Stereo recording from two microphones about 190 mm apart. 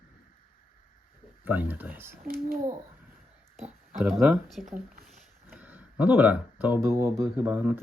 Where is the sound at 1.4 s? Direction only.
10° right (ahead or behind).